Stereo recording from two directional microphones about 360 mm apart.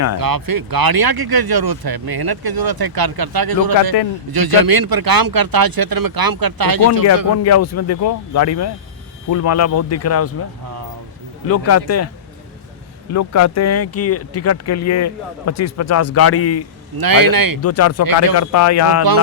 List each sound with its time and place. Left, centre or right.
0.2 s speech: right
7.4 s speech: left
11.4 s speech: left
17.0 s speech: right
17.6 s speech: left